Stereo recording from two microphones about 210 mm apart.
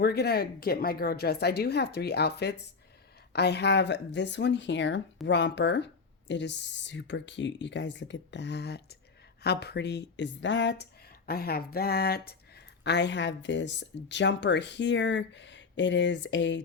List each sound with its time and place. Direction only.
0.0 s a woman's voice: 50° left (ahead or behind)
11.3 s speech: 45° left (ahead or behind)